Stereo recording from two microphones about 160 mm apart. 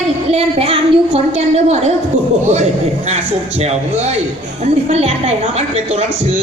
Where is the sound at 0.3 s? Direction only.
40° right (ahead or behind).